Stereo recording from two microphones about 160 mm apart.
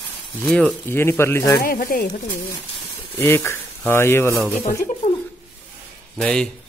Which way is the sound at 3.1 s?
15° left (ahead or behind).